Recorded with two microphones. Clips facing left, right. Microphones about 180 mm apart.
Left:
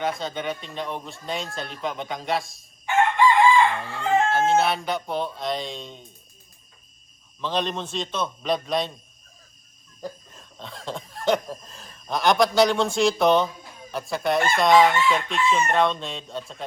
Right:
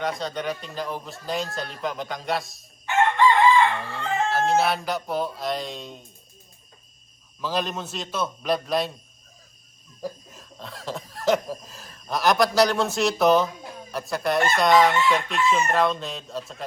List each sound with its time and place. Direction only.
0.0 s chicken: centre (ahead or behind)
3.8 s chicken: centre (ahead or behind)
7.4 s chicken: 5° right (ahead or behind)
10.0 s cough: 5° right (ahead or behind)
13.9 s chicken: centre (ahead or behind)